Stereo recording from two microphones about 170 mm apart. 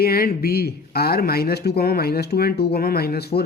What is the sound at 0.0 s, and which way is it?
Speech, 60° left (ahead or behind).